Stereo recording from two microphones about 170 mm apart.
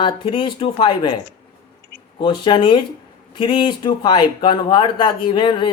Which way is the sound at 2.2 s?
30° left (ahead or behind).